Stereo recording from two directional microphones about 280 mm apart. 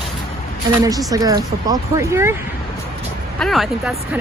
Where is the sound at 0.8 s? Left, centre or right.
Centre.